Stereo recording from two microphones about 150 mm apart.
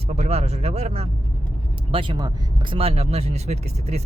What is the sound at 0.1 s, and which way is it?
Speech, 45° right (ahead or behind).